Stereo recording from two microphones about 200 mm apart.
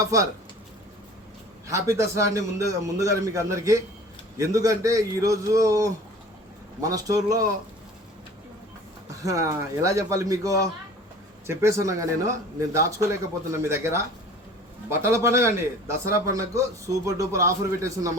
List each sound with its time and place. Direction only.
0.0 s a man's voice: 15° right (ahead or behind)
1.6 s a man's voice: 15° right (ahead or behind)
9.2 s a man's voice: 15° right (ahead or behind)